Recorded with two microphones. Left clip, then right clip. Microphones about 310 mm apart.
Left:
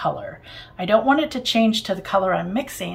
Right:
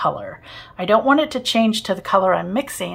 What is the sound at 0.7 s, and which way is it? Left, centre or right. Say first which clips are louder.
Speech: right 2 dB; centre.